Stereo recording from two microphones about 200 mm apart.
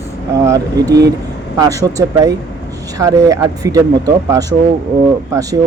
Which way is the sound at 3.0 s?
15° right (ahead or behind).